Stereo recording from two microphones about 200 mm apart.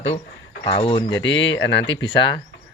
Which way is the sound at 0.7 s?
25° left (ahead or behind).